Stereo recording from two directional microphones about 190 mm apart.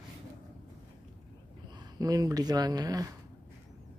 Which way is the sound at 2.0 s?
20° right (ahead or behind).